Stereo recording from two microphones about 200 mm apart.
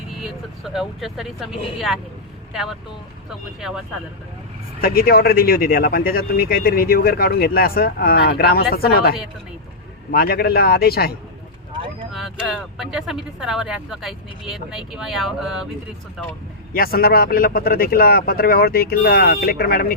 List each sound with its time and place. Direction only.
0.2 s speech: centre (ahead or behind)
4.8 s speech: 50° left (ahead or behind)
12.1 s speech: centre (ahead or behind)
16.7 s speech: 50° left (ahead or behind)